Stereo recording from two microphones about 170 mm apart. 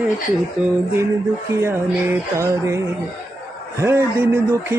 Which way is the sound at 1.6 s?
15° right (ahead or behind).